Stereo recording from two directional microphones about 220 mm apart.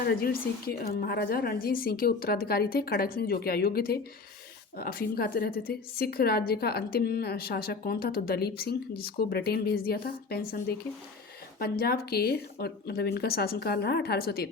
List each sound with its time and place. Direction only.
0.0 s a woman's voice: 45° left (ahead or behind)